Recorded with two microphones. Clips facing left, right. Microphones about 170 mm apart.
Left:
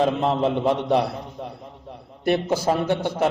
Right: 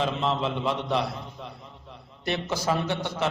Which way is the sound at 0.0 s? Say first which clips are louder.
Left 6 dB; 50° left (ahead or behind).